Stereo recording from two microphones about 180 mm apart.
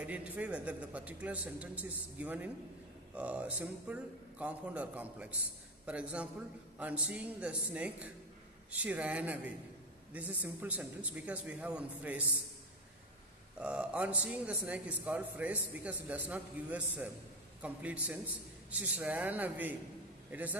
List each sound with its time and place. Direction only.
0.0 s a man's voice: 10° right (ahead or behind)
13.6 s a man's voice: 5° right (ahead or behind)